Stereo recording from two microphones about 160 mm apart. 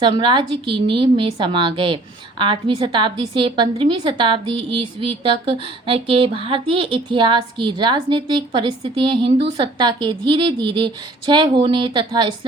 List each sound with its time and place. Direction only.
0.0 s a woman's voice: 30° right (ahead or behind)